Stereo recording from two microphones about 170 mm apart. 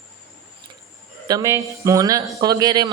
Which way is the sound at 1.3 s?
20° right (ahead or behind).